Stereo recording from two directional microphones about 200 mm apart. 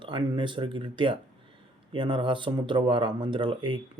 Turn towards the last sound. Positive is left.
turn(degrees=-25)  # may be behind; listen again after turning